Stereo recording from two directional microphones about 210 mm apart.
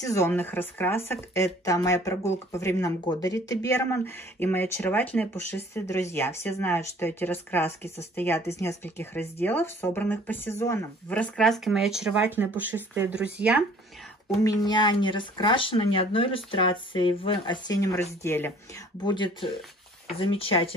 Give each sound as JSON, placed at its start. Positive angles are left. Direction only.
{"t": 0.0, "sound": "speech", "side_deg": 15}
{"t": 14.4, "sound": "speech", "side_deg": 20}
{"t": 19.0, "sound": "speech", "side_deg": 20}